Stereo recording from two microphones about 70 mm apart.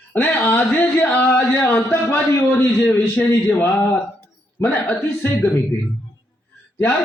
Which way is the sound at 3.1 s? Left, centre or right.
Left.